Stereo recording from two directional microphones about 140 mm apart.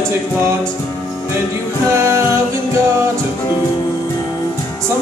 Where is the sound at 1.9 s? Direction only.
20° right (ahead or behind).